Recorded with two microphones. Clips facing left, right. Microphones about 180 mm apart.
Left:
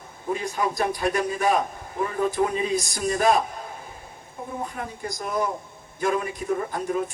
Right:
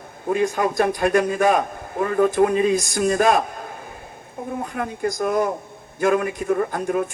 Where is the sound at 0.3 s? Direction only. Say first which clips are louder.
Right 6 dB; 55° right (ahead or behind).